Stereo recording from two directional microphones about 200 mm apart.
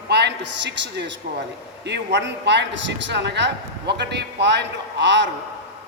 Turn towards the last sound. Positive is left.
turn(degrees=-65)  # may be behind; listen again after turning